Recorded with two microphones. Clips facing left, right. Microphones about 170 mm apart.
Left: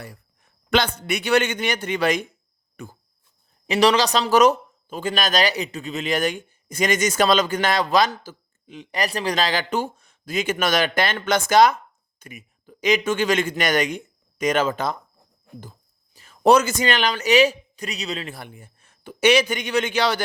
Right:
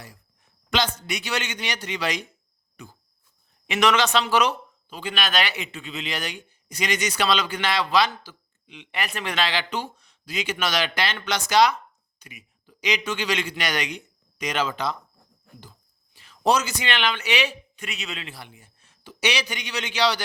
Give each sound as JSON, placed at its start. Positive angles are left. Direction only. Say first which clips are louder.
{"t": 0.7, "sound": "speech", "louder": "left 4 dB", "side_deg": 55}
{"t": 2.8, "sound": "cricket", "louder": "left 6 dB", "side_deg": 55}
{"t": 3.7, "sound": "speech", "louder": "left 3 dB", "side_deg": 35}
{"t": 16.1, "sound": "a man's voice", "louder": "left 6 dB", "side_deg": 45}